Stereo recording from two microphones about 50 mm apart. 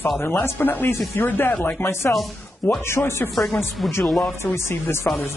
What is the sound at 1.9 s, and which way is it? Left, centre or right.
Speech, left.